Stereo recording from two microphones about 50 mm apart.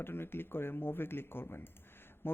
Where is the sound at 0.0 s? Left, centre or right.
Left.